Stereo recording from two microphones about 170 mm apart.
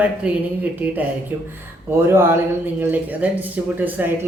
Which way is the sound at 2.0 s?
15° right (ahead or behind).